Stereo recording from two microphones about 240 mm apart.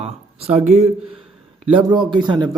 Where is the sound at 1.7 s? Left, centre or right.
Centre.